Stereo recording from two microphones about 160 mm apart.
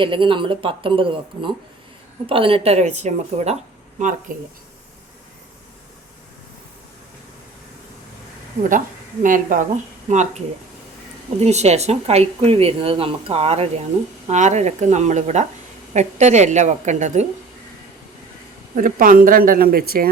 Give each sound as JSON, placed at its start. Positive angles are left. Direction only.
{"t": 0.0, "sound": "speech", "side_deg": -30}
{"t": 9.2, "sound": "speech", "side_deg": -55}
{"t": 18.7, "sound": "speech", "side_deg": -60}